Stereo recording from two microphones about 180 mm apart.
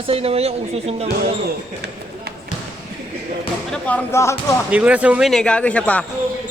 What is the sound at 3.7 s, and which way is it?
Speech, 10° left (ahead or behind).